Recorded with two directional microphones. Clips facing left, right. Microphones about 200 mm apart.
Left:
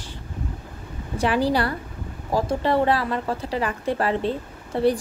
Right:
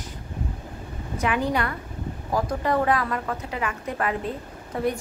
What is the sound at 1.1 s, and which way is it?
Speech, 35° left (ahead or behind).